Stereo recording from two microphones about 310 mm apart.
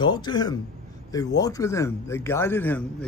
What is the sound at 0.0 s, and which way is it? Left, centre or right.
A man's voice, centre.